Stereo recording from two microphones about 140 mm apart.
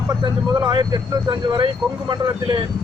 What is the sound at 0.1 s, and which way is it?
A man's voice, 30° right (ahead or behind).